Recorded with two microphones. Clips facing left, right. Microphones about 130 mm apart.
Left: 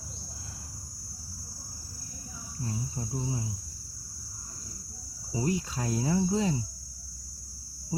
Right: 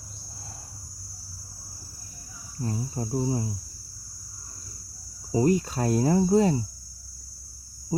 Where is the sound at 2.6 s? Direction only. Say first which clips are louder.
Right 5 dB; 45° right (ahead or behind).